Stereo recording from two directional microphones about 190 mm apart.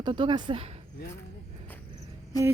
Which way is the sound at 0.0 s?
25° right (ahead or behind).